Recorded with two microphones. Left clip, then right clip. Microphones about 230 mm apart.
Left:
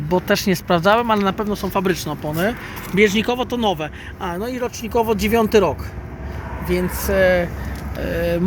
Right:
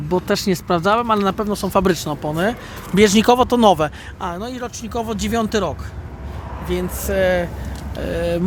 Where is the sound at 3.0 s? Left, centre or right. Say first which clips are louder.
Right 4 dB; right.